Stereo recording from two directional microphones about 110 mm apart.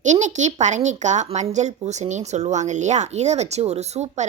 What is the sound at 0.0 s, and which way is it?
A woman's voice, 90° right.